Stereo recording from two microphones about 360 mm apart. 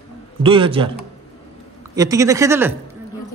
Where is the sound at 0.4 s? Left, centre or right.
Centre.